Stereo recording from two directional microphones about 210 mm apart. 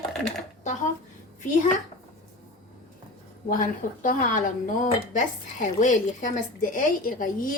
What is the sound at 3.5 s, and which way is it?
Speech, 40° left (ahead or behind).